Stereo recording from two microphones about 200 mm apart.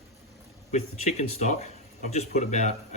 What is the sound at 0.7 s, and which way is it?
Speech, 35° left (ahead or behind).